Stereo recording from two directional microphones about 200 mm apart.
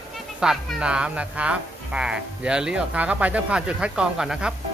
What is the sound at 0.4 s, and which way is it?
Speech, 5° right (ahead or behind).